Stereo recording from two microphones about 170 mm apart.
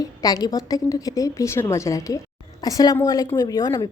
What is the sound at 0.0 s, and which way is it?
A woman's voice, 20° left (ahead or behind).